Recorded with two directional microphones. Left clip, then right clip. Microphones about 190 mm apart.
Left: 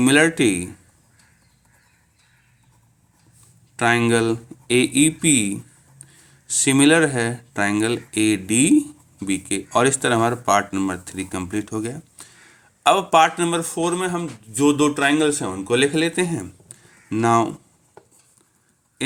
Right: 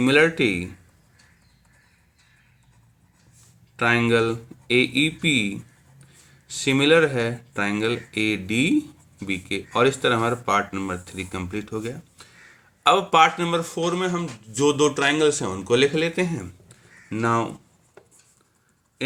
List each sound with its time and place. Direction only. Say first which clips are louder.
0.0 s speech: left 2 dB; 45° left (ahead or behind)
3.8 s speech: left 2 dB; 45° left (ahead or behind)